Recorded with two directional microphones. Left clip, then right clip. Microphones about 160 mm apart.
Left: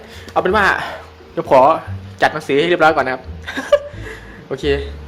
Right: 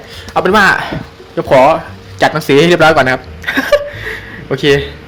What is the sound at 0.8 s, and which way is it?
Speech, centre (ahead or behind).